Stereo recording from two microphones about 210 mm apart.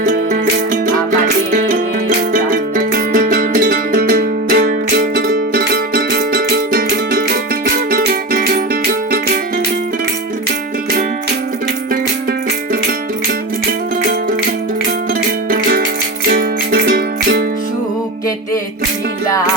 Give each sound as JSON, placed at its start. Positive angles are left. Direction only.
{"t": 0.0, "sound": "music", "side_deg": -35}
{"t": 15.4, "sound": "music", "side_deg": -45}